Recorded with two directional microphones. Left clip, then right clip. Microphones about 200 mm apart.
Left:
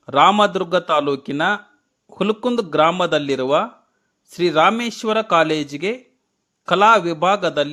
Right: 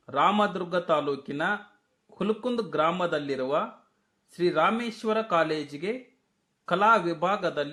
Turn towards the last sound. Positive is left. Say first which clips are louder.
# left 9 dB
turn(degrees=35)  # may be behind; listen again after turning